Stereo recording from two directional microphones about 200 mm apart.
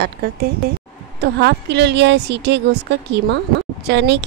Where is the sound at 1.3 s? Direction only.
55° right (ahead or behind).